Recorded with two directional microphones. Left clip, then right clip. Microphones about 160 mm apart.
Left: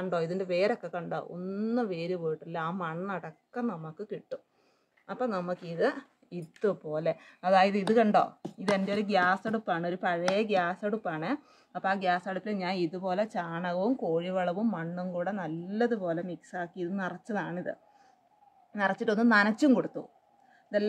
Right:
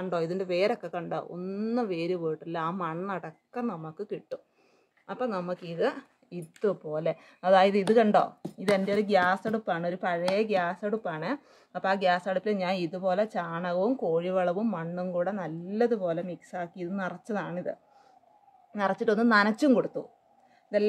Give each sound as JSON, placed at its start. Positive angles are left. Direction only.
{"t": 0.0, "sound": "speech", "side_deg": -10}
{"t": 5.0, "sound": "speech", "side_deg": -10}
{"t": 11.7, "sound": "speech", "side_deg": -40}